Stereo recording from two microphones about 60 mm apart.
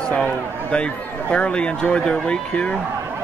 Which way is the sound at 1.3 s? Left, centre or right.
Centre.